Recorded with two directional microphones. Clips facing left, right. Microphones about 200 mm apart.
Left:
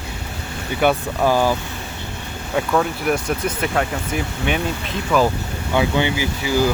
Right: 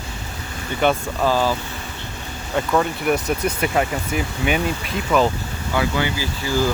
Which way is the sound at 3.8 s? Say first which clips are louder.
Right 1 dB; 5° right (ahead or behind).